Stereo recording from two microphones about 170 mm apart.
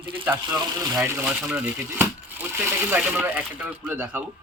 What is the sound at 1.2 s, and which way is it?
Speech, 5° right (ahead or behind).